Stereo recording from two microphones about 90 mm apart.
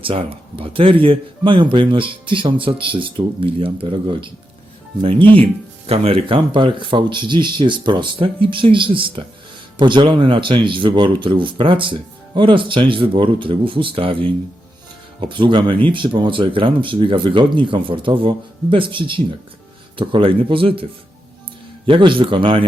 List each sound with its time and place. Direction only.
0.0 s speech: 90° right; by 4.3 s 70° right (ahead or behind)
5.8 s speech: 90° right
15.2 s speech: 65° right (ahead or behind); by 20.8 s 80° right
21.8 s speech: 70° right (ahead or behind)